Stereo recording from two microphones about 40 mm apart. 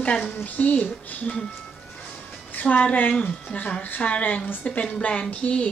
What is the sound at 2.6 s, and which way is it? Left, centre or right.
A woman's voice, left.